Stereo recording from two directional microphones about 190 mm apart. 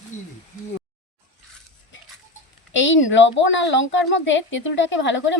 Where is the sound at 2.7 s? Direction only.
80° left.